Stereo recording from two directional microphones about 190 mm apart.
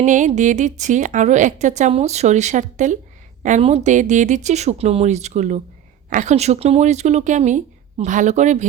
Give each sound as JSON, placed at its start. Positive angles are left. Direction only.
{"t": 0.0, "sound": "a woman's voice", "side_deg": -40}